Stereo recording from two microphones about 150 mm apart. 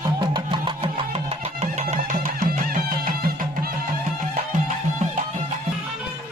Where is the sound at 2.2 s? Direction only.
65° right (ahead or behind).